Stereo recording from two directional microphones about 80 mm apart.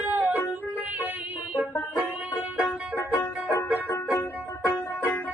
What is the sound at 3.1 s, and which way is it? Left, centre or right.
Music, left.